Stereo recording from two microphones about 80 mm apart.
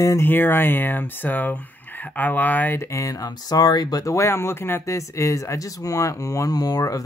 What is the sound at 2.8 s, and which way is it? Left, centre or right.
Speech, left.